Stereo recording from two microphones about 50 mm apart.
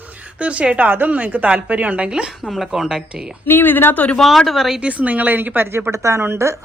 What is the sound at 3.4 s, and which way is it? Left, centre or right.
Speech, left.